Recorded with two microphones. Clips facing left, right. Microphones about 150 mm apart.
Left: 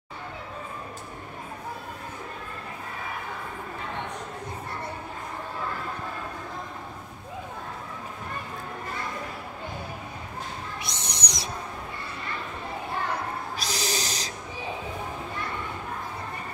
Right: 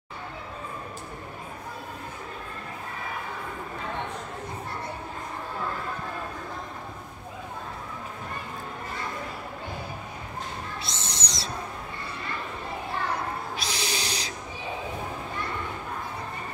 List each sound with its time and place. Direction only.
10.8 s owl: 15° left (ahead or behind)
13.6 s owl: 40° left (ahead or behind)